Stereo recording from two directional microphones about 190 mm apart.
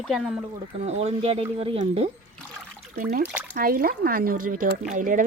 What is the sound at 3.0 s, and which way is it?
Speech, 55° right (ahead or behind).